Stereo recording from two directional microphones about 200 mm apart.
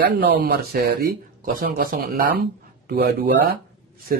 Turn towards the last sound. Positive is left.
turn(degrees=-50)  # may be behind; listen again after turning